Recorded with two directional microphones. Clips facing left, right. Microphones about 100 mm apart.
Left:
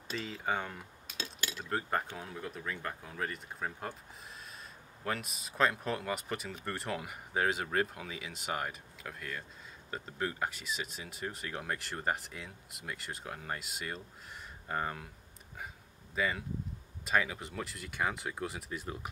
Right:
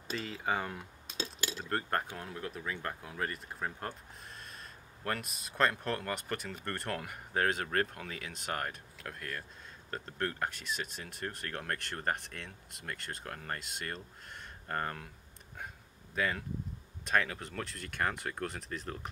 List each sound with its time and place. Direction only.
0.1 s speech: centre (ahead or behind)
1.0 s cutlery: 25° right (ahead or behind)
1.6 s speech: centre (ahead or behind)
16.2 s speech: centre (ahead or behind)